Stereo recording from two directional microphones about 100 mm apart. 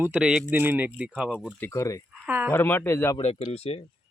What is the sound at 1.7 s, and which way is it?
Speech, 30° left (ahead or behind).